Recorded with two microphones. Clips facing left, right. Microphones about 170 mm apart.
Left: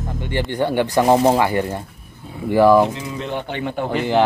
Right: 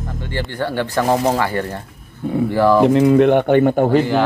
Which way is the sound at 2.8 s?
60° right (ahead or behind).